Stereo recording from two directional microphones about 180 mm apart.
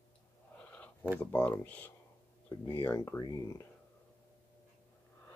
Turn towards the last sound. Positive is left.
turn(degrees=20)  # may be behind; listen again after turning